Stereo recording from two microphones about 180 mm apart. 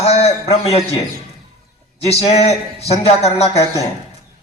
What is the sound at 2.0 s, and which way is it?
A man's voice, 35° left (ahead or behind).